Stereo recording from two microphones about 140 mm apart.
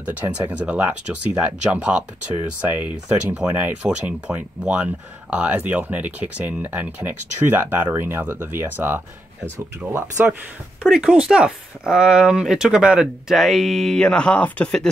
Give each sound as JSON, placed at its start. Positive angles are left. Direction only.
{"t": 0.5, "sound": "speech", "side_deg": -10}
{"t": 10.8, "sound": "speech", "side_deg": -5}